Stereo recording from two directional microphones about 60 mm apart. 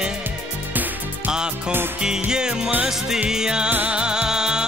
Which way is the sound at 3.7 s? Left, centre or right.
Right.